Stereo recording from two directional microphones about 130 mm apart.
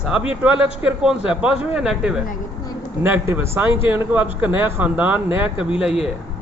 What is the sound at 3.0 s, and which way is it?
Speech, 15° right (ahead or behind).